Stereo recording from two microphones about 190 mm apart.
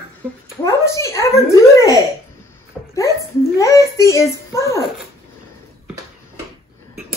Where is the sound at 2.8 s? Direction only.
Centre (ahead or behind).